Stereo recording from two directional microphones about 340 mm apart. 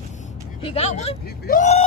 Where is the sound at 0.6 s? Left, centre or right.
Centre.